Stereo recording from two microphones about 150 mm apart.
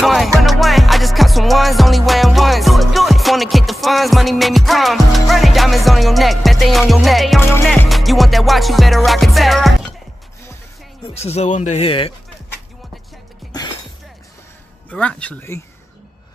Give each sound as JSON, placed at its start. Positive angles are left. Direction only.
{"t": 0.0, "sound": "music", "side_deg": 0}
{"t": 11.1, "sound": "speech", "side_deg": 45}
{"t": 14.9, "sound": "speech", "side_deg": 10}